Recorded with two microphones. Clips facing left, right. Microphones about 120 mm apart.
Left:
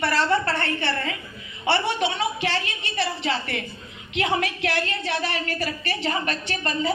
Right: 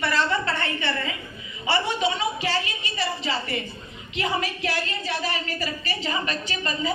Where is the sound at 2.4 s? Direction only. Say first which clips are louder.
Even; 65° left (ahead or behind).